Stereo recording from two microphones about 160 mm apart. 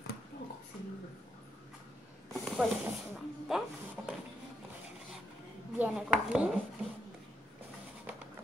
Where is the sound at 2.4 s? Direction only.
Centre (ahead or behind).